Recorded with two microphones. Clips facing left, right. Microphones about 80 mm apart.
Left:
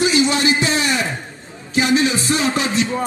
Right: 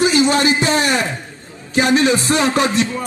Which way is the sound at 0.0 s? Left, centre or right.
Right.